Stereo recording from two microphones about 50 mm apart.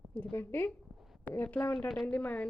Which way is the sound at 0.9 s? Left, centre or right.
Centre.